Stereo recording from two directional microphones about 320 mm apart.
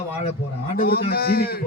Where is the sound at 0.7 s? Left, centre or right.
Left.